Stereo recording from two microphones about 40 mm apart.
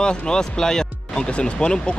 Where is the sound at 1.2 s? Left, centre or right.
Left.